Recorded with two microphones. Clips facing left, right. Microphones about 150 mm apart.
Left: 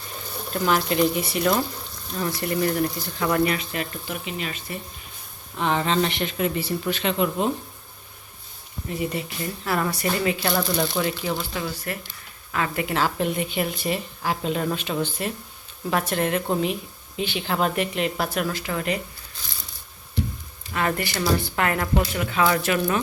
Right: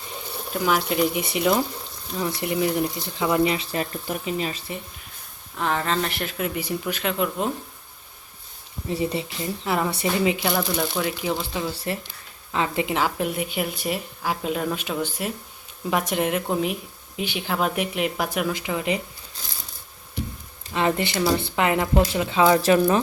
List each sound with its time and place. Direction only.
0.5 s a woman's voice: 5° right (ahead or behind); by 4.6 s 35° right (ahead or behind)
5.5 s speech: centre (ahead or behind)
8.9 s speech: 30° right (ahead or behind)
9.4 s speech: 20° right (ahead or behind)
10.5 s a woman's voice: 5° right (ahead or behind)
11.3 s a woman's voice: 15° right (ahead or behind)
20.7 s speech: 25° right (ahead or behind)